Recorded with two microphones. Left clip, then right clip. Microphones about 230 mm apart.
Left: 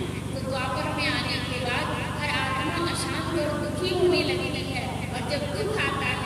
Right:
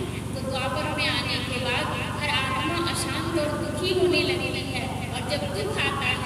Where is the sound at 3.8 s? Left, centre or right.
Right.